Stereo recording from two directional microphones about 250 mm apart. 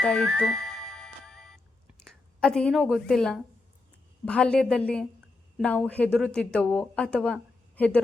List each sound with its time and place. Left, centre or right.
0.0 s music: centre
2.0 s a woman's voice: centre